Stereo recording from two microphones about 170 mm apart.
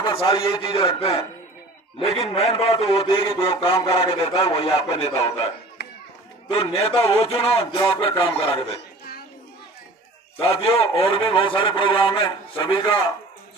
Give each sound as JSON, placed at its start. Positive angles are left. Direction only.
{"t": 0.0, "sound": "a man's voice", "side_deg": 30}
{"t": 6.5, "sound": "a man's voice", "side_deg": 35}
{"t": 10.4, "sound": "a man's voice", "side_deg": 35}